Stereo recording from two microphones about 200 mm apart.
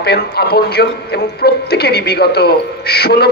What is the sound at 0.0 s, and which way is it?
A man's voice, 50° left (ahead or behind).